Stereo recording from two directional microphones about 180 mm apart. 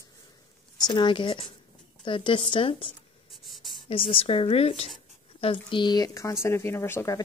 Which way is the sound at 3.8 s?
30° left (ahead or behind).